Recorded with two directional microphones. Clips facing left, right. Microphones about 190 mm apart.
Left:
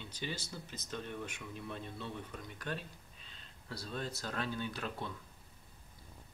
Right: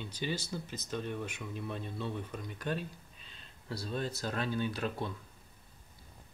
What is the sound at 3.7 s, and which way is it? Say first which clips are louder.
Speech: right 5 dB; 20° right (ahead or behind).